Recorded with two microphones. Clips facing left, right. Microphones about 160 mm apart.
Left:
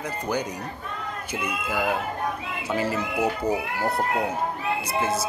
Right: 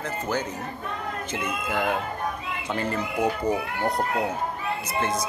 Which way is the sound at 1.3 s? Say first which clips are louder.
Left 1 dB; 10° left (ahead or behind).